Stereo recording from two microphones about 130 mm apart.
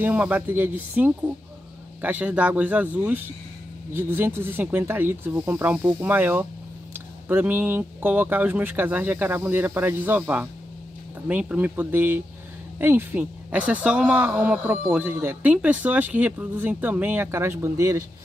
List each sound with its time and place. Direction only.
0.0 s speech: 10° right (ahead or behind)